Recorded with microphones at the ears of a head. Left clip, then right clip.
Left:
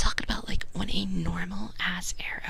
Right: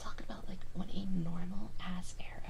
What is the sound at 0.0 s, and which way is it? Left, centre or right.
Whispering, left.